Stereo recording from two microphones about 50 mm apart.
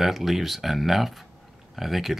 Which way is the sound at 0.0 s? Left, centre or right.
Centre.